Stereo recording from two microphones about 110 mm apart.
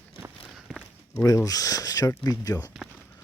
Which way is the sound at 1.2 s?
35° left (ahead or behind).